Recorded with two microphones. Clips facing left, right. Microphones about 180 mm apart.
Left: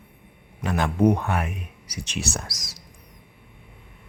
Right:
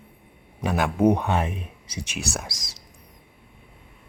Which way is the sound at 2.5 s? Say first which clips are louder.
Right 1 dB; 25° right (ahead or behind).